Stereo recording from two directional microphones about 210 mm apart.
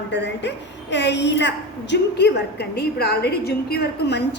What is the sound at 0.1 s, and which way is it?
A woman's voice, 55° left (ahead or behind).